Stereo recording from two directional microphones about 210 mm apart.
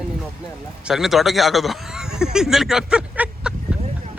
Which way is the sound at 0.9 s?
Centre (ahead or behind).